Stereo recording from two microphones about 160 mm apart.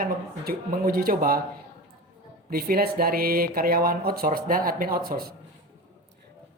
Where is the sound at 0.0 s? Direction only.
65° right (ahead or behind).